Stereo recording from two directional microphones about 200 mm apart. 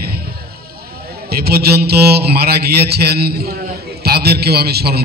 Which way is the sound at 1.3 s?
50° right (ahead or behind).